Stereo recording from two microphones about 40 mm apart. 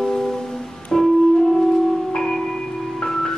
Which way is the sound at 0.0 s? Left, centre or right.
Centre.